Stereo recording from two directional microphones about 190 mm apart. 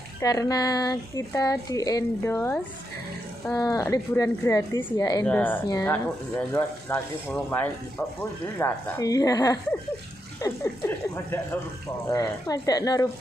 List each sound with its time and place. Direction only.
0.2 s a woman's voice: 20° left (ahead or behind)
12.1 s speech: 20° left (ahead or behind)